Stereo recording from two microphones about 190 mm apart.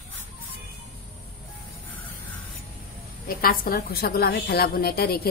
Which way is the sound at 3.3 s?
50° left (ahead or behind).